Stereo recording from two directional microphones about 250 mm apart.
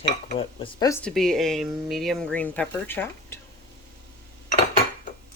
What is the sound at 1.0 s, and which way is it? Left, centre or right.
Speech, centre.